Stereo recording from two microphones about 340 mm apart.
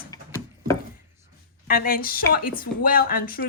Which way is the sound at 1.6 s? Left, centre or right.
Left.